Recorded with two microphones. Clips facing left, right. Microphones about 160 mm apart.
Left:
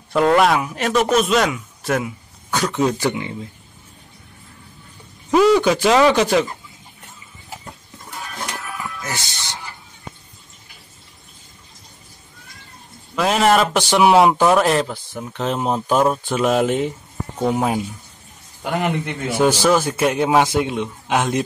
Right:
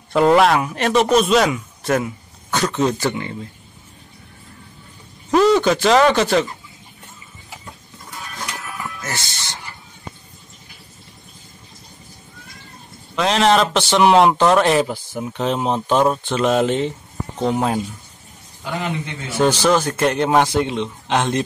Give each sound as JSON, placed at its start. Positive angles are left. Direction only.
{"t": 0.1, "sound": "a man's voice", "side_deg": -5}
{"t": 5.3, "sound": "a man's voice", "side_deg": 5}
{"t": 9.0, "sound": "a man's voice", "side_deg": 15}
{"t": 13.1, "sound": "speech", "side_deg": 5}
{"t": 15.4, "sound": "a man's voice", "side_deg": 0}
{"t": 18.6, "sound": "speech", "side_deg": 60}
{"t": 19.3, "sound": "a man's voice", "side_deg": 10}